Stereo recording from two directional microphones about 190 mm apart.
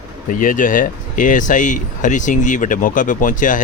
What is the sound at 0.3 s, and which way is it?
Speech, 45° left (ahead or behind).